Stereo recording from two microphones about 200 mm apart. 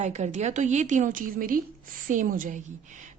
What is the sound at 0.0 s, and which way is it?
A woman's voice, 35° right (ahead or behind).